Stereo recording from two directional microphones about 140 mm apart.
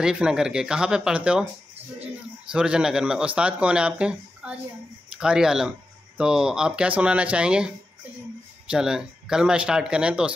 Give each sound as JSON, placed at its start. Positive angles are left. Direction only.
{"t": 0.0, "sound": "speech", "side_deg": -5}
{"t": 2.5, "sound": "speech", "side_deg": -5}